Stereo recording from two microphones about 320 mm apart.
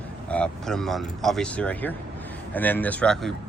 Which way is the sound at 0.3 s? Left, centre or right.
Centre.